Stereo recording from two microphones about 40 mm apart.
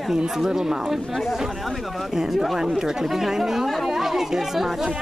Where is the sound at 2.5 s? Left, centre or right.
Centre.